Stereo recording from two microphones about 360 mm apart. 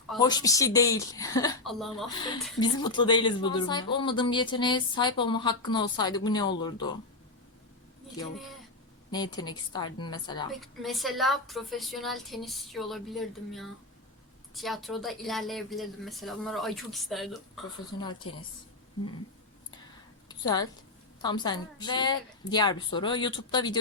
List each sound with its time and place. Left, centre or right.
0.2 s speech: centre
2.6 s speech: centre
9.1 s speech: centre
10.5 s a woman's voice: centre
18.0 s speech: centre
20.2 s a sound: centre
21.2 s speech: centre